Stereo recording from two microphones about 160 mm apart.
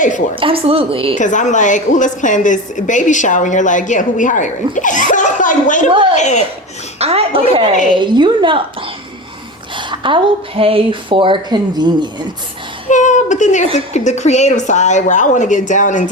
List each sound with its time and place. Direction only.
0.3 s a woman's voice: 35° right (ahead or behind)
1.1 s a woman's voice: 50° left (ahead or behind)
7.0 s a woman's voice: 40° right (ahead or behind)
9.7 s a woman's voice: 30° right (ahead or behind)
12.9 s a sound: 50° left (ahead or behind)
13.7 s a woman's voice: 45° left (ahead or behind)